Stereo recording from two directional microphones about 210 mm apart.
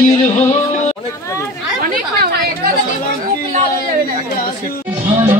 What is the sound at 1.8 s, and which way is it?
Chatter, 45° right (ahead or behind).